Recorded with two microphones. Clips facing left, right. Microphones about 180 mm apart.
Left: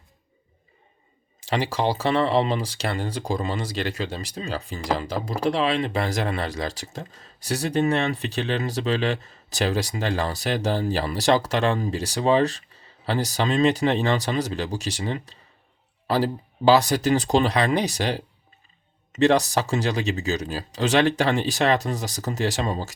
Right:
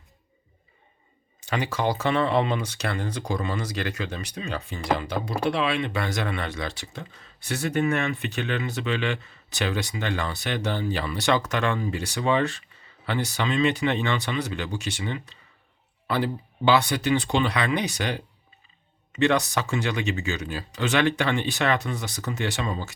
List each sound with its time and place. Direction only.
1.4 s speech: 30° left (ahead or behind)